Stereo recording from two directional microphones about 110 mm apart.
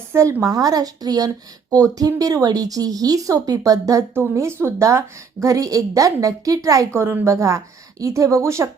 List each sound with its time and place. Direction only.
0.1 s a woman's voice: 25° right (ahead or behind)